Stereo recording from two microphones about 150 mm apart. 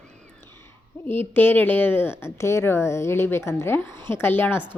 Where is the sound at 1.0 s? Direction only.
15° left (ahead or behind).